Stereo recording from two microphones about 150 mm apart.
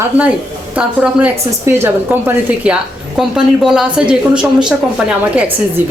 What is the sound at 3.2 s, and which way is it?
Speech, 5° right (ahead or behind).